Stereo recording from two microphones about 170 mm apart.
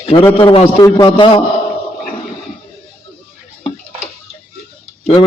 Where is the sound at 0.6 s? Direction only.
20° left (ahead or behind).